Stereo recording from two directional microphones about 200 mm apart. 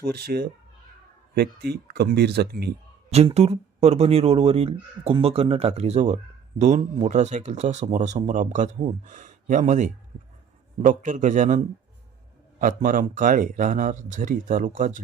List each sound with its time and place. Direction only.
0.0 s speech: 50° right (ahead or behind)
3.1 s speech: 30° right (ahead or behind)